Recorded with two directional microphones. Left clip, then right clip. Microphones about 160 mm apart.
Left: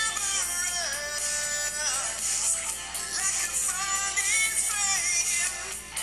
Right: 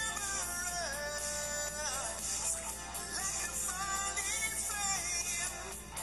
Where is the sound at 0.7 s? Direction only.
40° left (ahead or behind).